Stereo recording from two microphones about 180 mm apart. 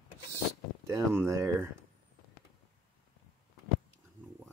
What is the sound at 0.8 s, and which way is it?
Speech, 15° right (ahead or behind).